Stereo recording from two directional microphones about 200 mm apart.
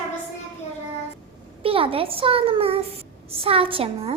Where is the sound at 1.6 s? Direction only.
25° right (ahead or behind).